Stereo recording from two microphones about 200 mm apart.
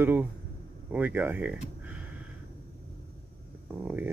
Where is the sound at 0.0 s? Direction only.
10° right (ahead or behind).